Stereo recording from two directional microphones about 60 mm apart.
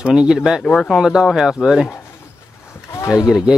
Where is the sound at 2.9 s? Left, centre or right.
Left.